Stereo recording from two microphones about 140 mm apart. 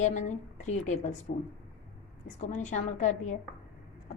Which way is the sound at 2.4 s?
55° left (ahead or behind).